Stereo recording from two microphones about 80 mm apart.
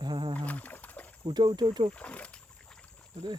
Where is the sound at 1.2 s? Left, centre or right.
Right.